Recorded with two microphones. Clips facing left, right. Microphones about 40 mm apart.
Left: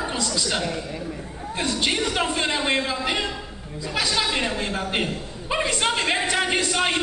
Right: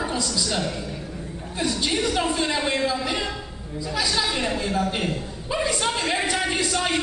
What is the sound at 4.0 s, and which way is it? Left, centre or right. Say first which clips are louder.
Chuckle: left 1 dB; left.